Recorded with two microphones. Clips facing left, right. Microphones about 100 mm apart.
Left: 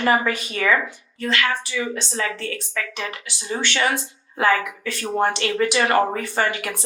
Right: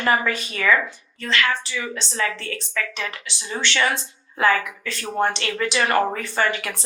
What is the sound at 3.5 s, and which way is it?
Speech, 30° left (ahead or behind).